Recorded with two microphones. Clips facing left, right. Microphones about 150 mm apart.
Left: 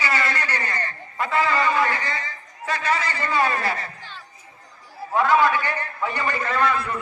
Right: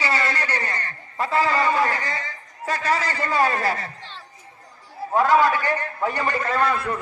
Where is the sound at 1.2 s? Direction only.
35° right (ahead or behind).